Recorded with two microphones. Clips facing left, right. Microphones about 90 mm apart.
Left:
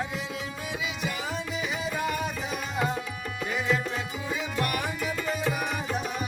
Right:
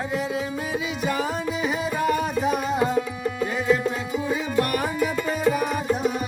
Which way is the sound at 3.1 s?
30° right (ahead or behind).